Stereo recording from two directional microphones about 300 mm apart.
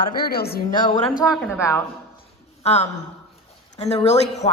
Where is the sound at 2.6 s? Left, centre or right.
Left.